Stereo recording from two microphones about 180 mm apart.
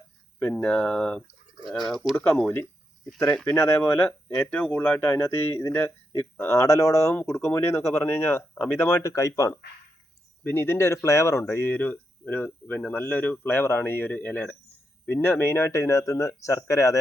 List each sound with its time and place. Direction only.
0.3 s speech: 10° left (ahead or behind)